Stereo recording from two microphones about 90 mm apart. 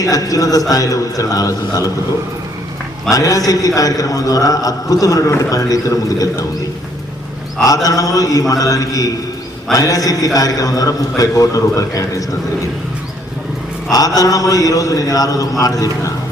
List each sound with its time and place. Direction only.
0.0 s a man's voice: 40° left (ahead or behind)
3.1 s a man's voice: 40° left (ahead or behind)
7.6 s a man's voice: 40° left (ahead or behind)
14.2 s a man's voice: 40° left (ahead or behind)